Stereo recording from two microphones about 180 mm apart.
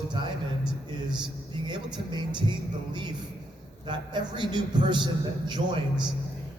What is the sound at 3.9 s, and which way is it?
Speech, 25° right (ahead or behind).